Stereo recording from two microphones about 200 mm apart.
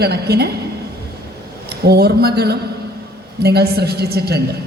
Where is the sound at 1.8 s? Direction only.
55° right (ahead or behind).